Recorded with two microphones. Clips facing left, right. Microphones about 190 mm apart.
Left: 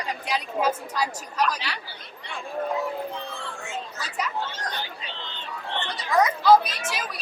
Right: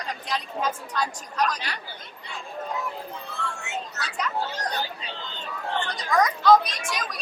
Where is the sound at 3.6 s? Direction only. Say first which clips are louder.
Even; 70° right (ahead or behind).